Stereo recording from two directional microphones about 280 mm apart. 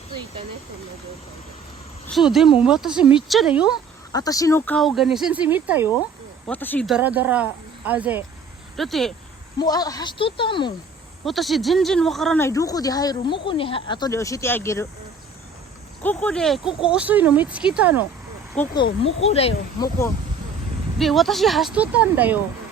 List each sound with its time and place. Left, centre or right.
2.0 s speech: centre
4.1 s speech: centre
6.5 s speech: centre
9.6 s speech: centre
11.3 s speech: centre
16.0 s speech: centre
18.8 s speech: left
21.0 s speech: centre